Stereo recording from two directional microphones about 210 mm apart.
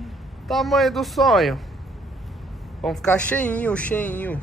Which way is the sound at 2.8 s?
Centre (ahead or behind).